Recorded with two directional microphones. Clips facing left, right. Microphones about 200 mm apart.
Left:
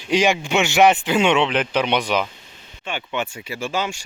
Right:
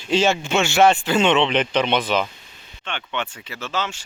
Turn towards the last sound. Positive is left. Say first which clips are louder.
# left 3 dB
turn(degrees=10)  # may be behind; listen again after turning